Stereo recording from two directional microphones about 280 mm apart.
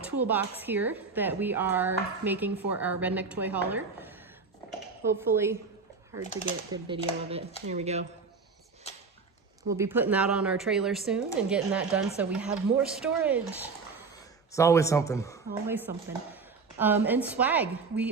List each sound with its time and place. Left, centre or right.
0.2 s a woman's voice: centre
6.8 s speech: centre
8.9 s a sound: left
9.6 s a woman's voice: centre
14.5 s speech: centre
15.6 s a woman's voice: centre